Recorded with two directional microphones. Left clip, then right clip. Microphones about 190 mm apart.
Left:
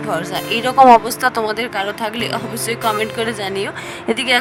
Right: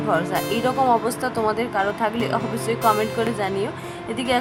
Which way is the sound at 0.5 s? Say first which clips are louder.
Left 11 dB; 50° left (ahead or behind).